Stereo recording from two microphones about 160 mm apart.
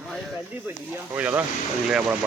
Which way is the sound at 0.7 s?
10° right (ahead or behind).